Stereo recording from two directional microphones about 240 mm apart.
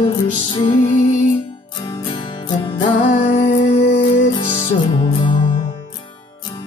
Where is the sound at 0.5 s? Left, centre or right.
Centre.